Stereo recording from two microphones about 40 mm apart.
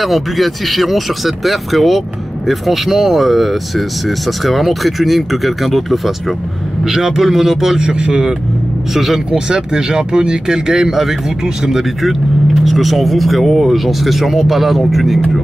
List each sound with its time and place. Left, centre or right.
0.0 s speech: centre
6.8 s speech: centre
7.8 s speech: right
8.9 s speech: centre
9.3 s speech: centre